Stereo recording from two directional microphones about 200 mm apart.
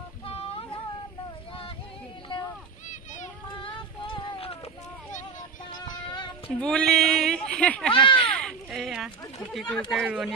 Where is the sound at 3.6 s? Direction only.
25° left (ahead or behind).